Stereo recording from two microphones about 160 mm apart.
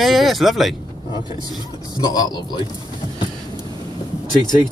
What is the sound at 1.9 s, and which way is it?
Speech, 25° left (ahead or behind).